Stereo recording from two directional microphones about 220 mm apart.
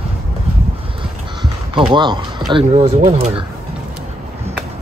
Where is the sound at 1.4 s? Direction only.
20° right (ahead or behind).